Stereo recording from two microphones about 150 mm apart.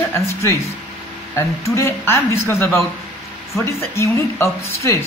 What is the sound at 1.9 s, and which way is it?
Speech, 15° left (ahead or behind).